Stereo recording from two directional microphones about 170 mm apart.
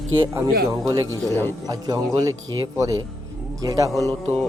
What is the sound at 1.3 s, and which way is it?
Speech, 15° left (ahead or behind).